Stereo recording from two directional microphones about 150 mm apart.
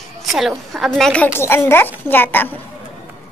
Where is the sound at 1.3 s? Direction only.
15° left (ahead or behind).